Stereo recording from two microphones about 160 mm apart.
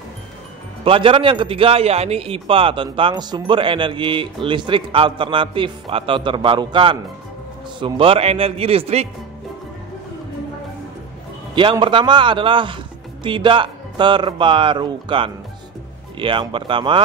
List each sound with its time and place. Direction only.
0.8 s a man's voice: 35° right (ahead or behind)
11.8 s a man's voice: 30° right (ahead or behind)